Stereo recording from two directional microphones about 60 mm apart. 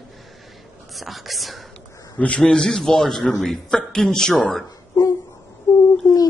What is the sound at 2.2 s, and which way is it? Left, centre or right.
A man's voice, centre.